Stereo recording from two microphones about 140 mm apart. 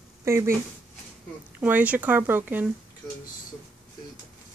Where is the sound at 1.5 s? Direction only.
10° right (ahead or behind).